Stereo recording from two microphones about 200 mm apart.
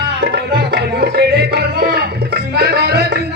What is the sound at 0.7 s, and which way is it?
Music, 50° right (ahead or behind).